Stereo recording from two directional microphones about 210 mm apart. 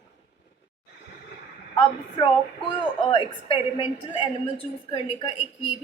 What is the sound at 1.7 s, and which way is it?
A woman's voice, 25° left (ahead or behind).